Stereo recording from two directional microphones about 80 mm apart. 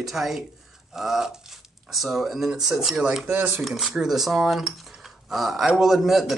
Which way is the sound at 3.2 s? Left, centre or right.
Right.